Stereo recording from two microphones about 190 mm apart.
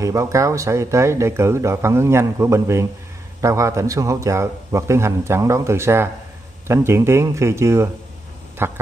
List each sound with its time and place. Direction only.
0.0 s speech: 15° right (ahead or behind)